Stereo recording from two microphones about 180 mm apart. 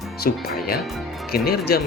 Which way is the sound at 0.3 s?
55° left (ahead or behind).